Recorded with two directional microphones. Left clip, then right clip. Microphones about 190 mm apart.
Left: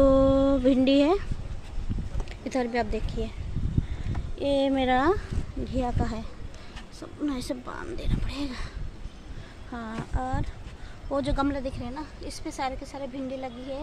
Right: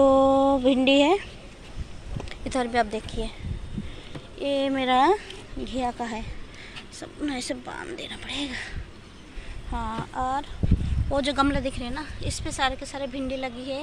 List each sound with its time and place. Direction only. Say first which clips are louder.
0.0 s music: right 2 dB; 25° left (ahead or behind)
0.8 s speech: right 5 dB; 20° left (ahead or behind)
2.4 s speech: right 3 dB; 20° left (ahead or behind)
4.4 s speech: left 1 dB; 30° left (ahead or behind)
9.8 s speech: right 5 dB; 20° left (ahead or behind)
11.1 s a woman's voice: right 4 dB; 5° left (ahead or behind)